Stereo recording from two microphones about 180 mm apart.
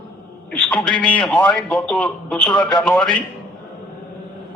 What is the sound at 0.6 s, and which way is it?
A man's voice, 5° left (ahead or behind).